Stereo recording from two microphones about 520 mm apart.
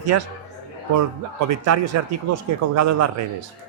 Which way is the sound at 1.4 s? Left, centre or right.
Right.